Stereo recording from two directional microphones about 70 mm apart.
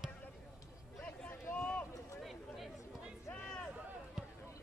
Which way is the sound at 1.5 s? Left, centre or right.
Centre.